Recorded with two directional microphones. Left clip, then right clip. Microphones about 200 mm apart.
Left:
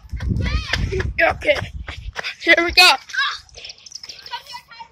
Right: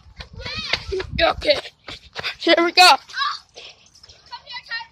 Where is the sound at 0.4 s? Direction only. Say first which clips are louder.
Even; 10° right (ahead or behind).